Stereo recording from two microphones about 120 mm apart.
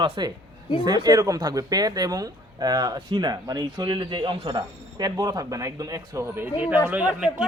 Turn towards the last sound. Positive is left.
turn(degrees=-10)  # may be behind; listen again after turning